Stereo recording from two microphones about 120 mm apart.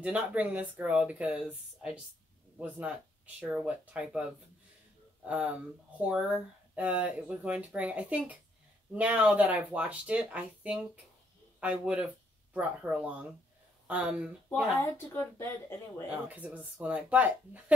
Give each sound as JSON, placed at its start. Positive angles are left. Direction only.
{"t": 0.0, "sound": "speech", "side_deg": -10}
{"t": 14.8, "sound": "a woman's voice", "side_deg": 20}
{"t": 16.1, "sound": "speech", "side_deg": -10}